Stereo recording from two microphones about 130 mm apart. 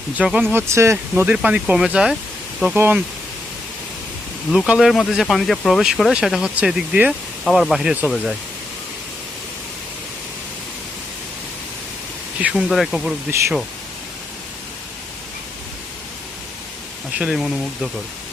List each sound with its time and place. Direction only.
0.2 s speech: 10° right (ahead or behind)
0.5 s speech: 20° right (ahead or behind); by 2.1 s 5° right (ahead or behind)
2.7 s speech: 15° right (ahead or behind)
4.5 s speech: 5° right (ahead or behind)
12.4 s speech: 5° right (ahead or behind)
17.2 s speech: 5° right (ahead or behind)